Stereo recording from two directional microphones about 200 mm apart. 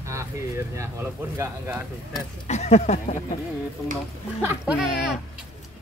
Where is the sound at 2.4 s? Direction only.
35° left (ahead or behind).